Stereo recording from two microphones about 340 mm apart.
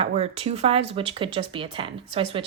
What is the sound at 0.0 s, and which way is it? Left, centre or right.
Speech, centre.